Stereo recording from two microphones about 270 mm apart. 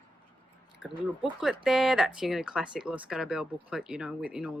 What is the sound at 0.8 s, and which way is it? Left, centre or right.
Speech, left.